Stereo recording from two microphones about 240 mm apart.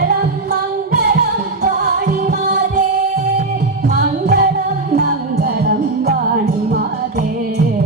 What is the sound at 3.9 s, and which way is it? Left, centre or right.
Music, right.